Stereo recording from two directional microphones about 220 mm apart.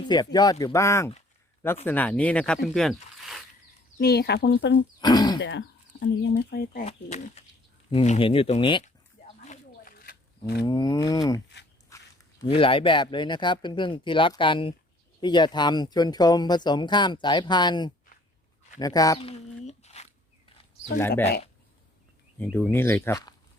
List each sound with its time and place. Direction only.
0.0 s speech: 20° left (ahead or behind); by 3.4 s centre (ahead or behind)
3.9 s speech: 45° left (ahead or behind)
4.9 s speech: 20° left (ahead or behind)
5.4 s speech: 55° left (ahead or behind)
6.8 s speech: 30° left (ahead or behind)
9.4 s wild animals: 35° left (ahead or behind)
10.7 s speech: 15° left (ahead or behind)
11.9 s dog: 15° left (ahead or behind)
12.4 s speech: 25° left (ahead or behind)
19.3 s squish: 30° left (ahead or behind)
22.4 s speech: 10° left (ahead or behind)